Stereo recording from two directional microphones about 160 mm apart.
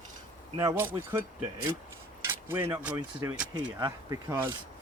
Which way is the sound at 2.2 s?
15° right (ahead or behind).